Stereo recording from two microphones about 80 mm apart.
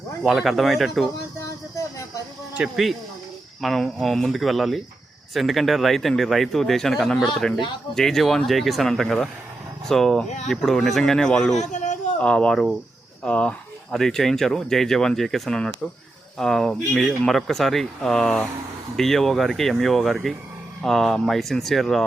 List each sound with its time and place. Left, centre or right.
0.3 s speech: centre
1.4 s a sound: left
2.6 s speech: centre
3.6 s speech: centre